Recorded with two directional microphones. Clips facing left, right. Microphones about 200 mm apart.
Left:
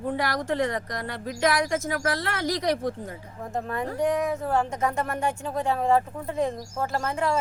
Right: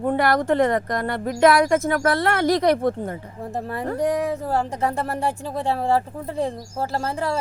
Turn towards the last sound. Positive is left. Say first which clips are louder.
# right 1 dB
turn(degrees=-35)  # may be behind; listen again after turning